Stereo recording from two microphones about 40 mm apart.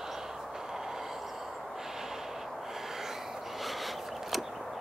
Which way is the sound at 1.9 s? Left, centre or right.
Centre.